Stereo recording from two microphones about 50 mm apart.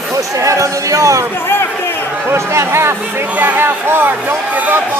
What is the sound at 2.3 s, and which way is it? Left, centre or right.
Speech, right.